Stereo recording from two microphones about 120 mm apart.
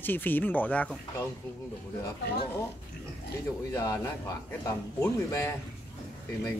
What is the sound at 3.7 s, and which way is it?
Speech, 20° left (ahead or behind).